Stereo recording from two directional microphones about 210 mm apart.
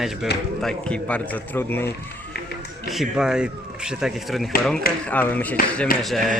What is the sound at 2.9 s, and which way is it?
A man's voice, centre (ahead or behind).